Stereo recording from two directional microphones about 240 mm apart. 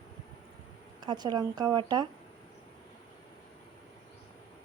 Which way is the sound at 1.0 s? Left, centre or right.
Centre.